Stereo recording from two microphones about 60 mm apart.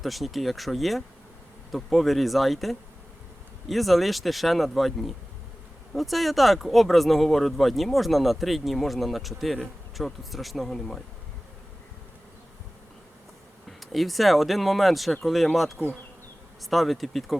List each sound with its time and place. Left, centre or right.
0.0 s speech: centre
13.7 s speech: centre